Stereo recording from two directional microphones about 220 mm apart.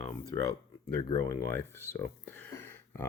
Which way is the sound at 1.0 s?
15° left (ahead or behind).